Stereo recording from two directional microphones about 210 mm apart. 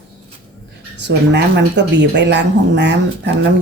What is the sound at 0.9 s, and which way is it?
Speech, 55° right (ahead or behind).